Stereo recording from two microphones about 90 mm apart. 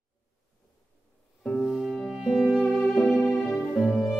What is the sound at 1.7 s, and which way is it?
Music, centre (ahead or behind).